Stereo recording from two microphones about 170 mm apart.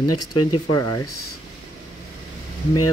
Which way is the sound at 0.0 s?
25° left (ahead or behind).